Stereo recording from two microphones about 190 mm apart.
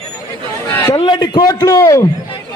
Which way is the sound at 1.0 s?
25° left (ahead or behind).